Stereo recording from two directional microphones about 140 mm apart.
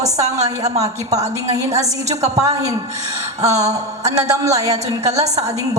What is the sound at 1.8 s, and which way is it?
A woman's voice, 25° right (ahead or behind).